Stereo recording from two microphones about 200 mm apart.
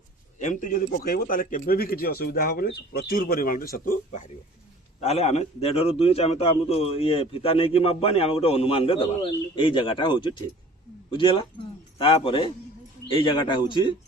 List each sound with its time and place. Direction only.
0.3 s a man's voice: 40° left (ahead or behind)
4.9 s a man's voice: 30° left (ahead or behind)